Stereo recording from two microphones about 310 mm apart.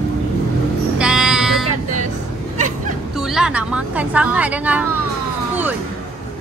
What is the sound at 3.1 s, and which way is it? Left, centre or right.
Speech, centre.